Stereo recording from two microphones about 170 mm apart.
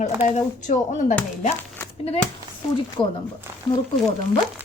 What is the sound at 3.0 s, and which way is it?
Speech, 5° left (ahead or behind).